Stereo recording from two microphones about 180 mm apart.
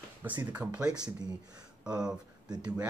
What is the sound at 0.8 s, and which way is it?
Speech, 20° right (ahead or behind).